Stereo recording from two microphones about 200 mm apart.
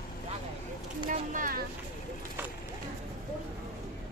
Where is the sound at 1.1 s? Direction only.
40° right (ahead or behind).